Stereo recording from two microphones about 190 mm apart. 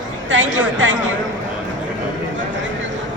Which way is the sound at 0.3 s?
80° right.